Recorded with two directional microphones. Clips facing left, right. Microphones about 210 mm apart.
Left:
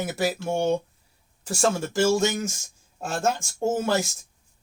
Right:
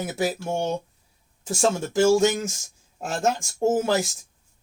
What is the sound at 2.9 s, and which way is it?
Speech, 15° right (ahead or behind).